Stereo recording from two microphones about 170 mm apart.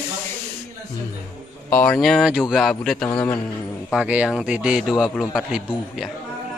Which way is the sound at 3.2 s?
15° left (ahead or behind).